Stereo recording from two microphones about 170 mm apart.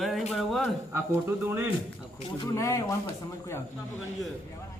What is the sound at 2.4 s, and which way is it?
Speech, 20° left (ahead or behind).